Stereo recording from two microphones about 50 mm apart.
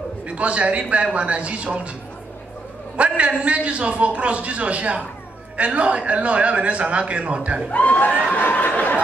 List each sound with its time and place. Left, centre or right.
0.3 s a man's voice: right
3.0 s a man's voice: right
7.7 s speech: left
8.1 s a sound: left
8.4 s speech: left